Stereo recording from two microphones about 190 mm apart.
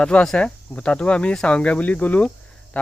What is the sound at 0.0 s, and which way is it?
Speech, 5° left (ahead or behind).